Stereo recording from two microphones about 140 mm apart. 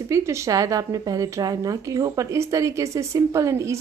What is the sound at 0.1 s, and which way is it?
A woman's voice, 25° right (ahead or behind).